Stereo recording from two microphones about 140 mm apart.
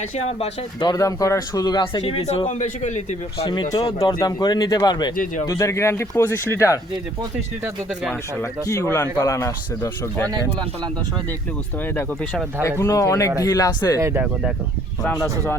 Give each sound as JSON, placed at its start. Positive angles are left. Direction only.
{"t": 0.2, "sound": "speech", "side_deg": 45}
{"t": 0.9, "sound": "a man's voice", "side_deg": 25}
{"t": 5.1, "sound": "speech", "side_deg": 70}
{"t": 5.5, "sound": "speech", "side_deg": 20}
{"t": 8.4, "sound": "speech", "side_deg": 20}
{"t": 11.9, "sound": "speech", "side_deg": 10}
{"t": 14.0, "sound": "speech", "side_deg": -15}